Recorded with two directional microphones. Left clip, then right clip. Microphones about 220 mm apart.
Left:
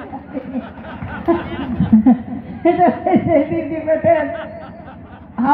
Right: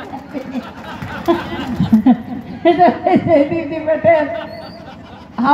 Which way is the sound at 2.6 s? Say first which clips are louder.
Right 3 dB; 15° left (ahead or behind).